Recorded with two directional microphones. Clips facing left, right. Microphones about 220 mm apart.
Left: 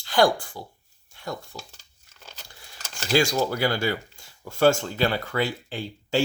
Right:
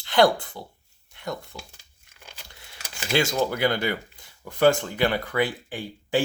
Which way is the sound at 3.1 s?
20° right (ahead or behind).